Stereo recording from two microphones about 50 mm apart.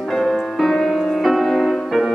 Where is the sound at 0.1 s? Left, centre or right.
Centre.